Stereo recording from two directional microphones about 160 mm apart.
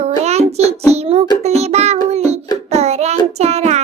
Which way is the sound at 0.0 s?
40° right (ahead or behind).